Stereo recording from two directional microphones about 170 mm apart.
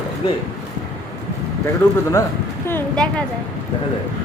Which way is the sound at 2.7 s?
5° left (ahead or behind).